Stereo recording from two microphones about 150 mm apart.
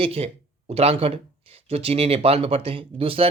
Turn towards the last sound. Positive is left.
turn(degrees=-40)  # may be behind; listen again after turning